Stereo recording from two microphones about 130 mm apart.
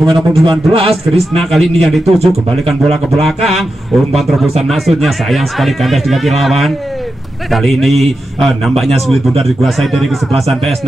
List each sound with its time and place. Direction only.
0.0 s speech: centre (ahead or behind)
0.5 s speech: 45° right (ahead or behind)
1.3 s speech: centre (ahead or behind)
3.3 s speech: centre (ahead or behind)